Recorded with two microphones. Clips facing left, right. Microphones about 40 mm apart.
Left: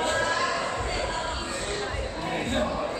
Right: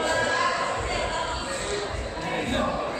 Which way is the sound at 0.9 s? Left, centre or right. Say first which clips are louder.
Right 2 dB; right.